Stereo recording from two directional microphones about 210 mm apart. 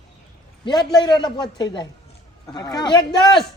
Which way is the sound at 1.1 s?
20° left (ahead or behind).